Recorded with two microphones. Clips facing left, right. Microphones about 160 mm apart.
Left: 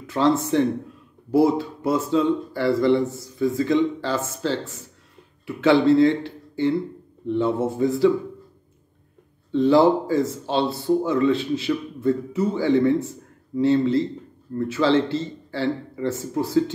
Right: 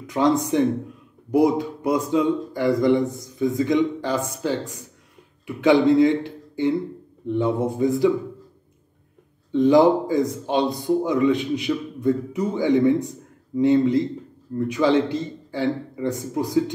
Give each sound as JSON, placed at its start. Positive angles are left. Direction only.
{"t": 0.0, "sound": "a man's voice", "side_deg": -15}
{"t": 9.5, "sound": "a man's voice", "side_deg": -15}